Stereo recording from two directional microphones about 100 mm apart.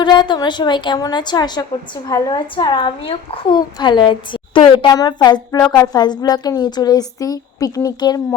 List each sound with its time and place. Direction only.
0.0 s a woman's voice: 50° left (ahead or behind)
3.8 s a woman's voice: 50° left (ahead or behind)
4.9 s a woman's voice: 40° left (ahead or behind)